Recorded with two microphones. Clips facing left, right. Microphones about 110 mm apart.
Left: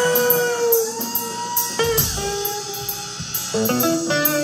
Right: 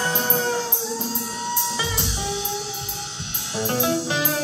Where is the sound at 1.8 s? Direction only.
85° left.